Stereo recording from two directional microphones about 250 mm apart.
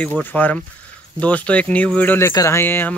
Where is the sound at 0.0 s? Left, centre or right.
Centre.